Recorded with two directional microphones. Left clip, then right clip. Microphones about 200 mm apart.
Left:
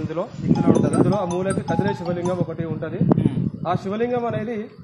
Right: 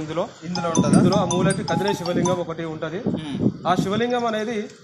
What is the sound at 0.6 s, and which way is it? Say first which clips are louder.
Speech: left 2 dB; 15° right (ahead or behind).